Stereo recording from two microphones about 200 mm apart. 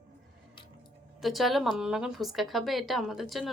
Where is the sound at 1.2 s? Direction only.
Centre (ahead or behind).